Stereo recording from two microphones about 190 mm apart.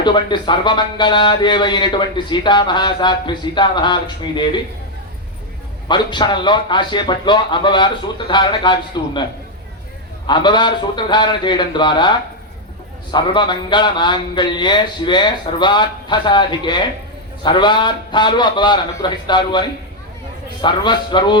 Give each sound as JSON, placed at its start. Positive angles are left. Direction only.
{"t": 0.0, "sound": "speech", "side_deg": 25}
{"t": 5.9, "sound": "speech", "side_deg": 25}
{"t": 10.2, "sound": "speech", "side_deg": 25}